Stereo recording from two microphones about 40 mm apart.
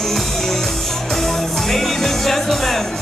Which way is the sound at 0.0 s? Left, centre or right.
Centre.